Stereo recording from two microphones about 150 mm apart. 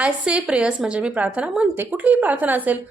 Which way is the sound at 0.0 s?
5° right (ahead or behind).